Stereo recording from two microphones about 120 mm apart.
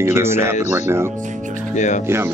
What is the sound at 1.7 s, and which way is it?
Speech, 90° left.